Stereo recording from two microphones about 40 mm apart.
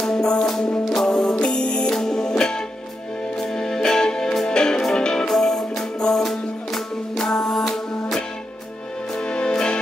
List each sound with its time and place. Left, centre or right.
0.0 s music: centre
1.4 s music: left
9.3 s music: centre